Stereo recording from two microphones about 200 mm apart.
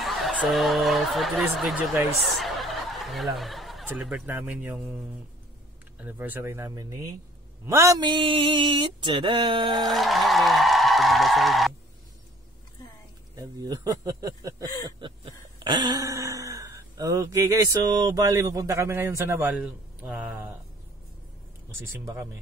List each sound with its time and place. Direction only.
0.0 s speech: centre (ahead or behind); by 7.1 s 15° right (ahead or behind)
7.6 s a sound: 15° right (ahead or behind)
9.8 s music: centre (ahead or behind)
13.4 s speech: 20° right (ahead or behind)
15.0 s a sound: 25° right (ahead or behind)
15.6 s speech: 20° right (ahead or behind); by 20.3 s 5° right (ahead or behind)
21.6 s speech: 15° right (ahead or behind)